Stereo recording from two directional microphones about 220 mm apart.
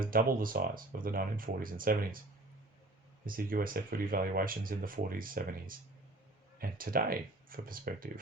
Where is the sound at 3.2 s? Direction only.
40° right (ahead or behind).